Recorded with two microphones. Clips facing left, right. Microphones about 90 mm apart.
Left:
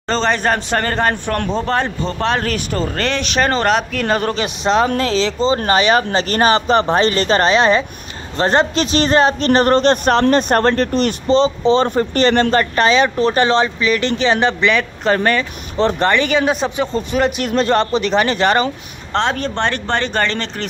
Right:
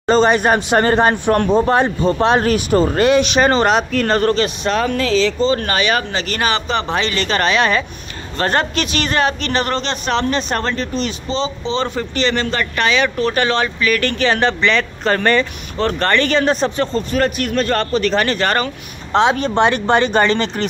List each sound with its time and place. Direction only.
0.0 s speech: 10° right (ahead or behind); by 4.8 s 20° left (ahead or behind)
4.8 s a man's voice: 35° left (ahead or behind)
19.1 s speech: 5° right (ahead or behind)